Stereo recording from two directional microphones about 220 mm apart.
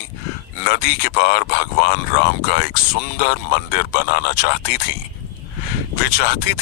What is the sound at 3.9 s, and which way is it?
Speech, 45° left (ahead or behind).